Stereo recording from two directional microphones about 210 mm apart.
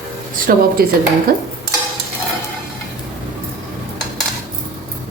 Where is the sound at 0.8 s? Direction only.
45° right (ahead or behind).